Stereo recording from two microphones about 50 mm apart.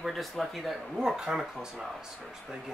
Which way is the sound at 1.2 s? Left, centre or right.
Centre.